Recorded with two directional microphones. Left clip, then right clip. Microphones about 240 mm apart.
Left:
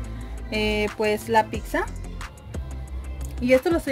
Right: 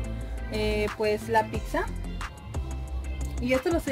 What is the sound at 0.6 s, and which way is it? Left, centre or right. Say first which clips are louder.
Music: left 4 dB; left.